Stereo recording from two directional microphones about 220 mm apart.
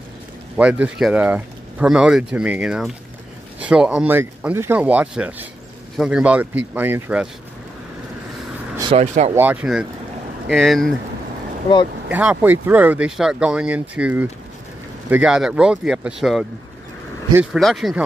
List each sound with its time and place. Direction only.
0.6 s speech: 5° right (ahead or behind)
8.9 s speech: 30° right (ahead or behind)
9.3 s speech: 10° right (ahead or behind)
12.1 s speech: 5° right (ahead or behind)